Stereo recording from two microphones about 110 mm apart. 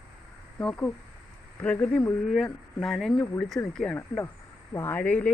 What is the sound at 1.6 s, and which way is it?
Speech, 15° left (ahead or behind).